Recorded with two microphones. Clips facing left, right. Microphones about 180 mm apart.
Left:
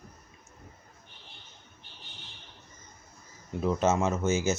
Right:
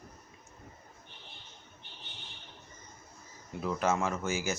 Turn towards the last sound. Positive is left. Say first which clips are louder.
# left 6 dB
turn(degrees=20)  # may be behind; listen again after turning